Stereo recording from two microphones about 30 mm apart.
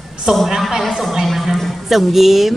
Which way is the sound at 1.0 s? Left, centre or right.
Centre.